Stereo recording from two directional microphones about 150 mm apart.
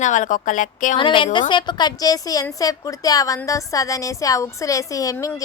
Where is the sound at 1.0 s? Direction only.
35° left (ahead or behind).